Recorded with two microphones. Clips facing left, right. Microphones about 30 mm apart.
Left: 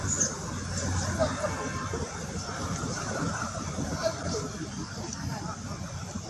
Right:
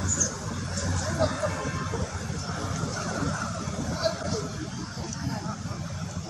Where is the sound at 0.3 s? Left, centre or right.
Right.